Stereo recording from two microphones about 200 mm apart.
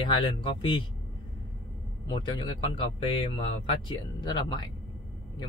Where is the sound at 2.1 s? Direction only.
25° left (ahead or behind).